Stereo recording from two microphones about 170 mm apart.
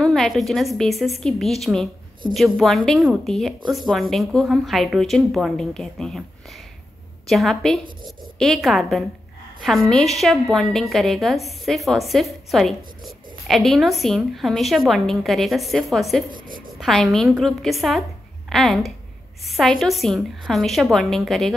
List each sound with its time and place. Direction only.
0.0 s a woman's voice: centre (ahead or behind)
16.3 s a sound: 55° right (ahead or behind)
16.8 s a woman's voice: centre (ahead or behind)